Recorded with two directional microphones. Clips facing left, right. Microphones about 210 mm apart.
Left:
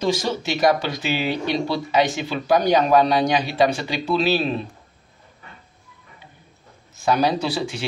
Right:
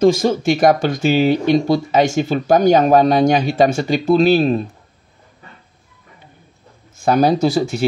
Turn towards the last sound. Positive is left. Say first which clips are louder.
# right 9 dB
turn(degrees=-45)  # may be behind; listen again after turning